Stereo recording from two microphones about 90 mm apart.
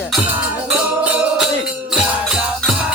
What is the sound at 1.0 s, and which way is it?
Music, 15° right (ahead or behind).